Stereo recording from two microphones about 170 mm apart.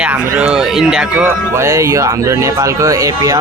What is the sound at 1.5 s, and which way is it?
Speech, 15° right (ahead or behind).